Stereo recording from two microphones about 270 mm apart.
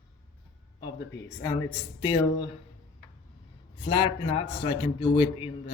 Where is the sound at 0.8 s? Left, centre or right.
Centre.